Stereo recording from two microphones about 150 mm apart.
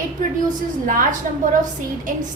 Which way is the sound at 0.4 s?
60° right (ahead or behind).